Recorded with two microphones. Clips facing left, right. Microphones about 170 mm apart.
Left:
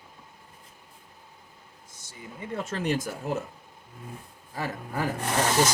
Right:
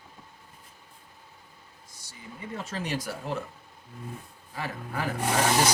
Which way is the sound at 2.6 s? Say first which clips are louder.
Left 4 dB; 50° left (ahead or behind).